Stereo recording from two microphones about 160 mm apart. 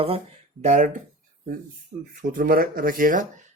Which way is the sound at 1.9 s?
40° right (ahead or behind).